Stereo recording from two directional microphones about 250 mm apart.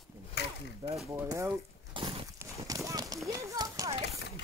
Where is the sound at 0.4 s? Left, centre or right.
Left.